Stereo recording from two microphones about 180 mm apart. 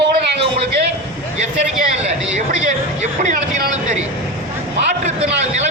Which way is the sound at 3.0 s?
45° right (ahead or behind).